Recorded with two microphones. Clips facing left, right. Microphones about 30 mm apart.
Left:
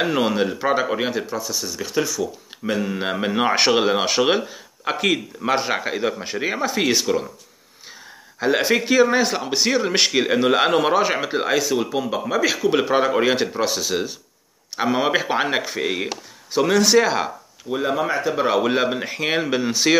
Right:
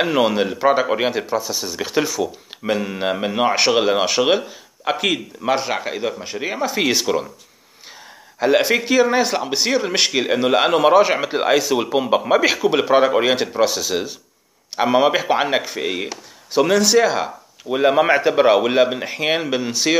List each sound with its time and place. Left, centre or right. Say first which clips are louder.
0.0 s speech: right 2 dB; centre
8.4 s speech: right 3 dB; centre
11.8 s speech: right 5 dB; right
12.5 s speech: right 3 dB; centre
17.6 s speech: right 7 dB; right
18.5 s speech: right 4 dB; centre